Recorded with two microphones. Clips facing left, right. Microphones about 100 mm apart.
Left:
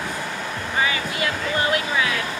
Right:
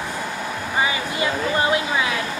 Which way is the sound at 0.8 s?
20° right (ahead or behind).